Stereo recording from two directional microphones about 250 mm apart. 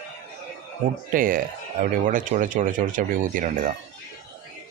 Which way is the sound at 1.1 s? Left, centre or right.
Right.